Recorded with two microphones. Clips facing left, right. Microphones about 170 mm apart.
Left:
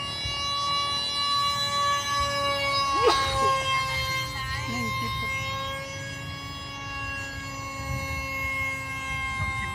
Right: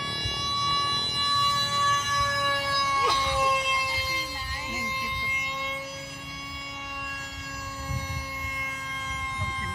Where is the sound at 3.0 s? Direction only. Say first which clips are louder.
Left 8 dB; 70° left (ahead or behind).